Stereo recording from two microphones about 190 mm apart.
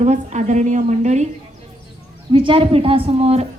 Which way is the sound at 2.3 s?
25° right (ahead or behind).